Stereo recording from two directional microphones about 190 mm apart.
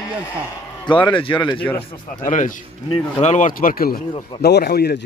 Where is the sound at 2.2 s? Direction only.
40° left (ahead or behind).